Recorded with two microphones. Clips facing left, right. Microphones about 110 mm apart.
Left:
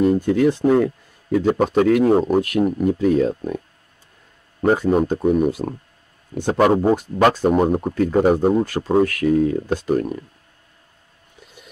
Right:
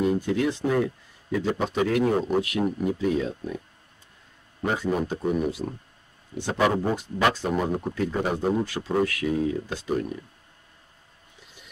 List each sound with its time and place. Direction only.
0.0 s speech: 50° left (ahead or behind)